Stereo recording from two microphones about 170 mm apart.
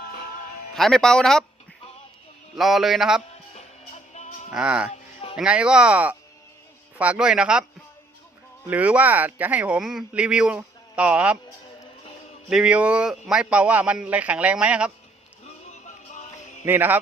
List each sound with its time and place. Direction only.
0.7 s speech: 5° left (ahead or behind)
2.6 s speech: centre (ahead or behind)
3.5 s music: 40° left (ahead or behind)
4.5 s speech: 5° right (ahead or behind)
8.6 s speech: 10° right (ahead or behind)
12.5 s speech: 5° right (ahead or behind)
16.1 s music: 45° left (ahead or behind)
16.6 s speech: 10° right (ahead or behind)